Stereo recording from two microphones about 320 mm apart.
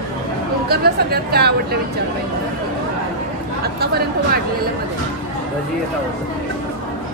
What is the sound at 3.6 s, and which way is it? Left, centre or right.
Chatter, right.